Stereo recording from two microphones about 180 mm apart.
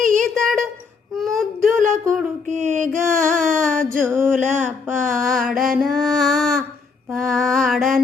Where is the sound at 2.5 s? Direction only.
40° right (ahead or behind).